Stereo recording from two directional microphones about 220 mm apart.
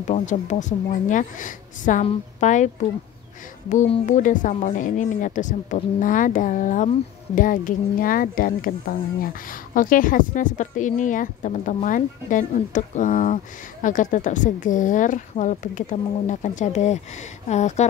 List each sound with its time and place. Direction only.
0.0 s speech: 35° left (ahead or behind)